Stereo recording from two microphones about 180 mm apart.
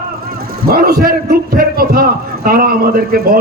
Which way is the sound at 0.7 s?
55° right (ahead or behind).